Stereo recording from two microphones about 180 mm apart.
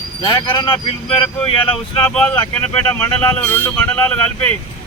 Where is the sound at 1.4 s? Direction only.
5° left (ahead or behind).